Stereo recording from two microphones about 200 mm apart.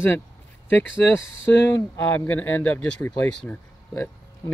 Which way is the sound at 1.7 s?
15° left (ahead or behind).